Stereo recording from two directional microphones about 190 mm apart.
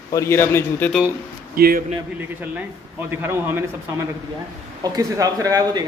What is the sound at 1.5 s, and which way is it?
Speech, 50° right (ahead or behind).